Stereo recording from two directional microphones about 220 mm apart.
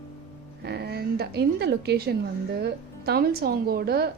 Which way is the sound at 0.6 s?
50° right (ahead or behind).